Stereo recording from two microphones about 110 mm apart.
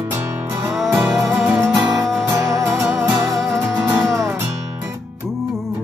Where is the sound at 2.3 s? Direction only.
30° right (ahead or behind).